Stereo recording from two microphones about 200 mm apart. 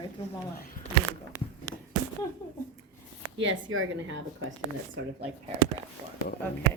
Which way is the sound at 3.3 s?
75° right (ahead or behind).